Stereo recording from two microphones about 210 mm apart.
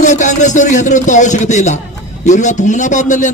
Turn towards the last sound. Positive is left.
turn(degrees=35)  # may be behind; listen again after turning